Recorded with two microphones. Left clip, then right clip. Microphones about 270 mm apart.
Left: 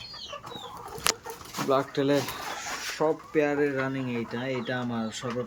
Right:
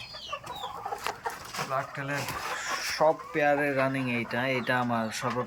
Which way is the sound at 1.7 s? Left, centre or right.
Left.